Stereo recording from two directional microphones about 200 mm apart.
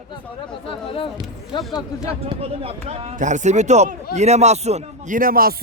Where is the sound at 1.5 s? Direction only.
25° left (ahead or behind).